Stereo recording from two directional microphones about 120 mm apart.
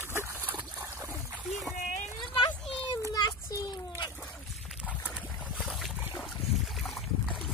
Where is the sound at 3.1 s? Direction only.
30° left (ahead or behind).